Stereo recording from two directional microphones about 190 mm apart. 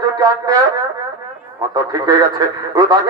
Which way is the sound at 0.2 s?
20° right (ahead or behind).